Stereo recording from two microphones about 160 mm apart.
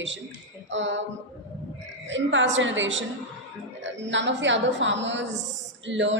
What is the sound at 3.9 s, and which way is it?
Speech, 90° right.